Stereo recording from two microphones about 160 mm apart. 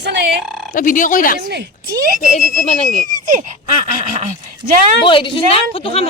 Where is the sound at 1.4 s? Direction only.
90° right.